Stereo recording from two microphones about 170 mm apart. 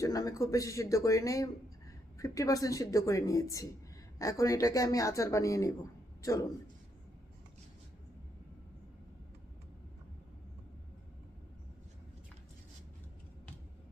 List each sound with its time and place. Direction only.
0.0 s speech: 20° left (ahead or behind)